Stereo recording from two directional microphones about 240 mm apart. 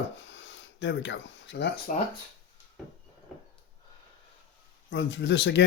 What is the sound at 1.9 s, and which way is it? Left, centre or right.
Speech, left.